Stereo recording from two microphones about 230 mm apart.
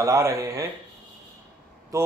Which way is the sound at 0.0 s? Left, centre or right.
Centre.